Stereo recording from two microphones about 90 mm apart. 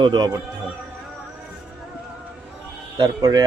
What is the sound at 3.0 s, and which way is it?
Speech, 45° right (ahead or behind).